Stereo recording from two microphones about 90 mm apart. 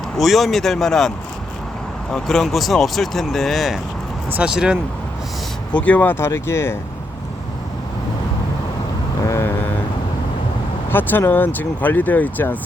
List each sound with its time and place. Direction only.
0.2 s speech: centre (ahead or behind)
2.1 s speech: 5° left (ahead or behind)
5.7 s speech: 15° left (ahead or behind)
9.2 s vehicle: 35° left (ahead or behind)
10.9 s speech: 20° left (ahead or behind)